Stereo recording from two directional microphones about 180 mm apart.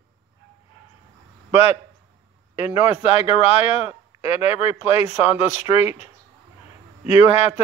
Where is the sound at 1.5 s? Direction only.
35° left (ahead or behind).